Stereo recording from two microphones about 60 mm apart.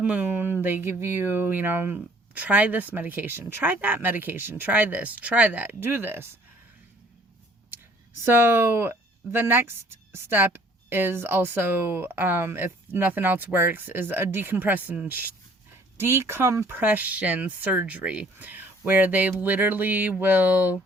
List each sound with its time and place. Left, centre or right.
0.0 s speech: right
5.8 s speech: right
8.2 s speech: right
16.0 s speech: right
16.6 s speech: right